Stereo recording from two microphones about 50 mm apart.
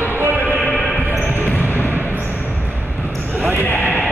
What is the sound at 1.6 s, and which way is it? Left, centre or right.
Basketball bounce, left.